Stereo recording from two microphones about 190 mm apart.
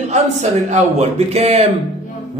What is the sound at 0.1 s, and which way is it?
A man's voice, 35° right (ahead or behind).